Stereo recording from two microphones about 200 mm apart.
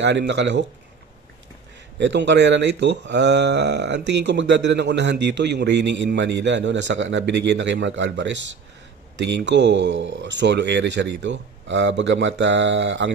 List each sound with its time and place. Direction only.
0.0 s speech: 60° right (ahead or behind)
2.0 s speech: 60° right (ahead or behind)